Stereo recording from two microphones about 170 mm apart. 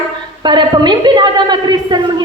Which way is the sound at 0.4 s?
25° right (ahead or behind).